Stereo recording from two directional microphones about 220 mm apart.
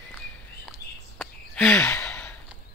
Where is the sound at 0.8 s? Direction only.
45° left (ahead or behind).